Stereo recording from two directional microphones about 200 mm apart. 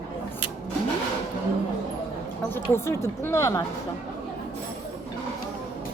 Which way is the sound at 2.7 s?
10° left (ahead or behind).